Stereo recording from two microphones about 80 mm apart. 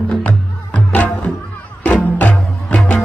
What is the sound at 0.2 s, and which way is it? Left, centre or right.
Music, centre.